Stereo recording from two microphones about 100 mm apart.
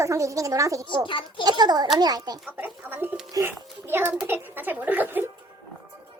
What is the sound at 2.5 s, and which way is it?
A child's voice, 20° right (ahead or behind).